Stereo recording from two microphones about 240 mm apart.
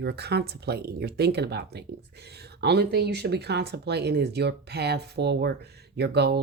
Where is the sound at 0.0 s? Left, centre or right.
Right.